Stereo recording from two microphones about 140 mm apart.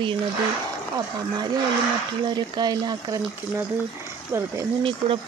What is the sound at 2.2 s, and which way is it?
Speech, 30° right (ahead or behind).